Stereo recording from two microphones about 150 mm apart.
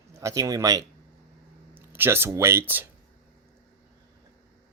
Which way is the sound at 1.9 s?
15° right (ahead or behind).